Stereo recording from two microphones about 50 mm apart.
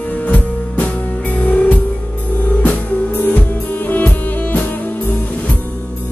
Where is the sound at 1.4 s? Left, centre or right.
Left.